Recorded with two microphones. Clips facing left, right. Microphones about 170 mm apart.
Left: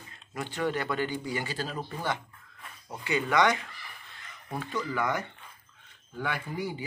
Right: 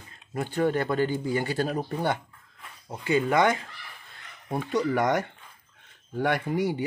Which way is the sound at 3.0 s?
45° right (ahead or behind).